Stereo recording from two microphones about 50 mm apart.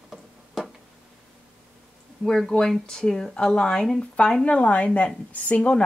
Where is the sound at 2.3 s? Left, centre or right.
Centre.